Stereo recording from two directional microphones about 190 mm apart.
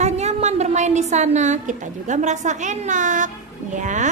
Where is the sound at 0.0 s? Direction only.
35° right (ahead or behind).